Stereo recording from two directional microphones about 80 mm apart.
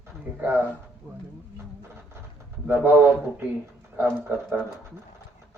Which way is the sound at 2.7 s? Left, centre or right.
Right.